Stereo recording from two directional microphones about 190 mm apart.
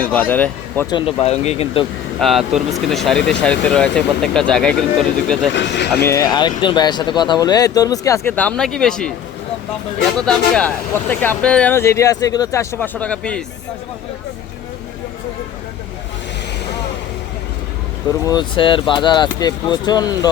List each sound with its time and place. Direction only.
0.0 s speech: 10° left (ahead or behind)
1.2 s speech: 35° left (ahead or behind)
2.2 s speech: centre (ahead or behind)
5.5 s speech: 65° left (ahead or behind)
6.0 s speech: 15° left (ahead or behind)
10.2 s speech: 5° left (ahead or behind)
18.3 s speech: 25° left (ahead or behind)